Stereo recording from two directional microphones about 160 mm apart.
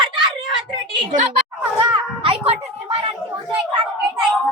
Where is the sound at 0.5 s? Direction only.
30° right (ahead or behind).